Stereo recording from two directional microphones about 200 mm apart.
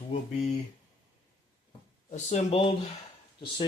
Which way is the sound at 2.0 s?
35° left (ahead or behind).